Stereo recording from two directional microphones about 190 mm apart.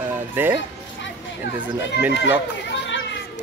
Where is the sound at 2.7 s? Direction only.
70° left (ahead or behind).